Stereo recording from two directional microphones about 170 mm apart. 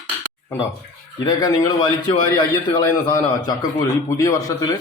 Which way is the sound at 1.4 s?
20° left (ahead or behind).